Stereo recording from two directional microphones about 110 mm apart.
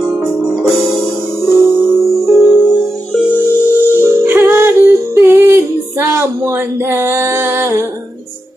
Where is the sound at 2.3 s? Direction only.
Centre (ahead or behind).